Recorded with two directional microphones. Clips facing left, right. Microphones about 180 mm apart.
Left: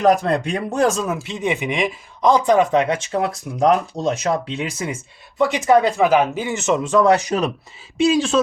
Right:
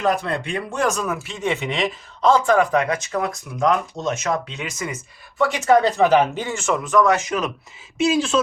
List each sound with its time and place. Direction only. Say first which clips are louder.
0.0 s speech: left 5 dB; 40° left (ahead or behind)
5.4 s speech: left 1 dB; 15° left (ahead or behind); by 7.5 s 35° left (ahead or behind)